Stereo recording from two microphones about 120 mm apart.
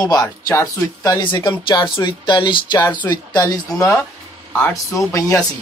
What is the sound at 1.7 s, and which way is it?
Speech, 40° left (ahead or behind).